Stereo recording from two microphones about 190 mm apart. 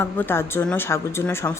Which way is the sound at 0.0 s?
10° left (ahead or behind).